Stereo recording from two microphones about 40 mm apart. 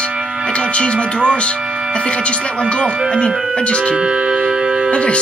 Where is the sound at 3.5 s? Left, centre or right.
Left.